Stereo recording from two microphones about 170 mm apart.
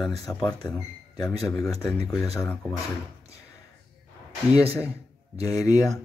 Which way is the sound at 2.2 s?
15° left (ahead or behind).